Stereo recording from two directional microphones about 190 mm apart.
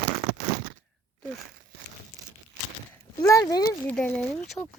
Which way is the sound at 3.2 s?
15° left (ahead or behind).